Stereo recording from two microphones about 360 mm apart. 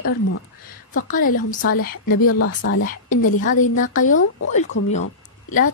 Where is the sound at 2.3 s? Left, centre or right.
Left.